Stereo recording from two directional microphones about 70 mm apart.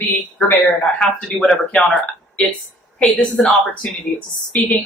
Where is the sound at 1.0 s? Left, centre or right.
Centre; by 4.7 s left.